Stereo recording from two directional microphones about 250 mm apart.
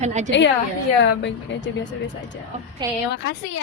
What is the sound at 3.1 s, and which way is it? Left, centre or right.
Speech, left.